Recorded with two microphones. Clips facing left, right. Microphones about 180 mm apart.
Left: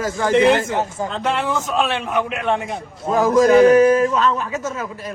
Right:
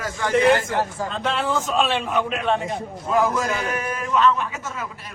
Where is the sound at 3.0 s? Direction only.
35° left (ahead or behind).